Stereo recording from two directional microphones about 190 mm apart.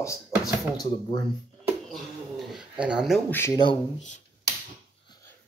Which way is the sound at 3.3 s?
15° left (ahead or behind).